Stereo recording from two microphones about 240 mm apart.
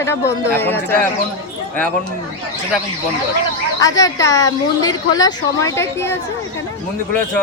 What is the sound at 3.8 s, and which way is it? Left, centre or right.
A woman's voice, centre.